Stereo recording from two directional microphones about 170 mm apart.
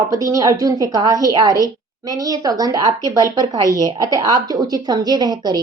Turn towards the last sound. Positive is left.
turn(degrees=-25)  # may be behind; listen again after turning